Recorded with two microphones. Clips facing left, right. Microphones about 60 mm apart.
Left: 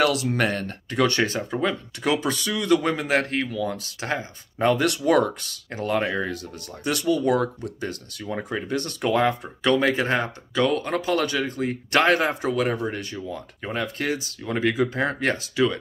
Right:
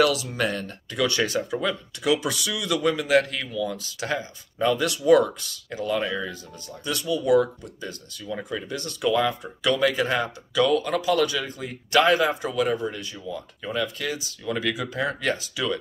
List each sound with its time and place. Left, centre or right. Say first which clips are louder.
0.0 s speech: left 1 dB; left
14.4 s speech: left 4 dB; left